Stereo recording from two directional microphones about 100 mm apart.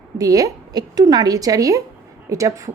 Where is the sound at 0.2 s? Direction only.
35° right (ahead or behind).